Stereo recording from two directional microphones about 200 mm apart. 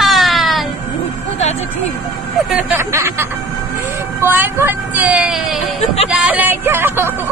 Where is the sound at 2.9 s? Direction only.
15° right (ahead or behind).